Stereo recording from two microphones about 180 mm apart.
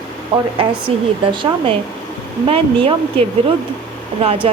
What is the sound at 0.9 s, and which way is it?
A woman's voice, 35° right (ahead or behind).